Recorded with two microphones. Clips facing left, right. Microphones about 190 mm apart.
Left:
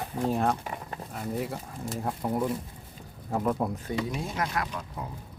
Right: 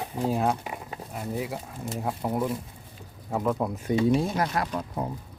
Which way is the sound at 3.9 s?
30° right (ahead or behind).